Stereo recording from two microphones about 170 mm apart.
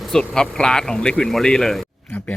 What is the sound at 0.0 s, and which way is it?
Speech, 5° left (ahead or behind).